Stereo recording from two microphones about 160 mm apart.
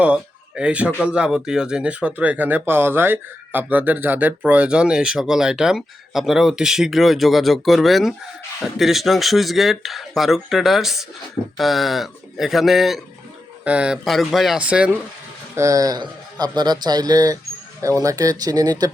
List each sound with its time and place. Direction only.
0.0 s a man's voice: 5° right (ahead or behind)
15.5 s a man's voice: 20° right (ahead or behind)